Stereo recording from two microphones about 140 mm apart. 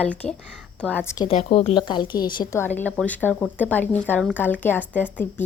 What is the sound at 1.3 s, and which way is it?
Speech, 50° left (ahead or behind).